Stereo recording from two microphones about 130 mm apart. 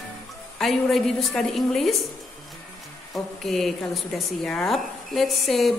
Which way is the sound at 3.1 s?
Centre (ahead or behind).